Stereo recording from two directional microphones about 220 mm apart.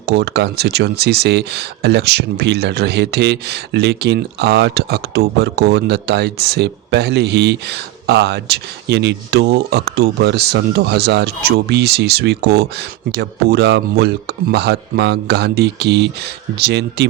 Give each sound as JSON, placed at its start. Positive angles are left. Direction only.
{"t": 0.0, "sound": "speech", "side_deg": -50}